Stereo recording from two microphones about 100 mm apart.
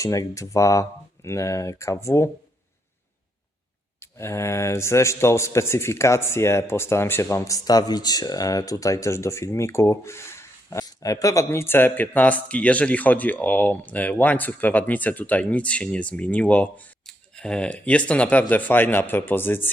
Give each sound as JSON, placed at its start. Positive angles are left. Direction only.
{"t": 0.0, "sound": "speech", "side_deg": 35}
{"t": 4.0, "sound": "speech", "side_deg": 25}